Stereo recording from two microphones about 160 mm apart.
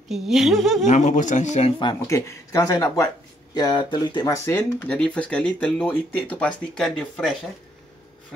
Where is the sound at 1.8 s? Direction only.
20° left (ahead or behind).